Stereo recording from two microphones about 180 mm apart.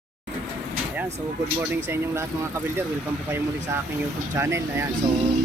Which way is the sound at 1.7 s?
15° right (ahead or behind).